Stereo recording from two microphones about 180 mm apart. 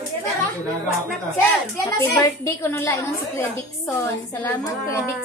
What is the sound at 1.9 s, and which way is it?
Child singing, 20° left (ahead or behind).